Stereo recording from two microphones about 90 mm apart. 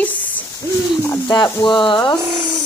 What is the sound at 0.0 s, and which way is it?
Hoot, 20° left (ahead or behind).